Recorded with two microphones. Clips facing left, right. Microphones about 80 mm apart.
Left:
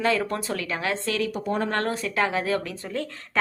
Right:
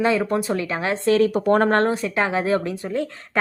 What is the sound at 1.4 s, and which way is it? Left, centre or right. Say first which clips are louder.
Speech: right 9 dB; right.